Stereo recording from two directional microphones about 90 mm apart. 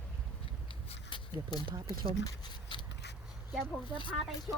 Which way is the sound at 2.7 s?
60° left (ahead or behind).